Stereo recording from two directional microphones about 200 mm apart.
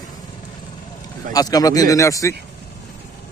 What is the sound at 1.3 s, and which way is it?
Speech, 20° left (ahead or behind).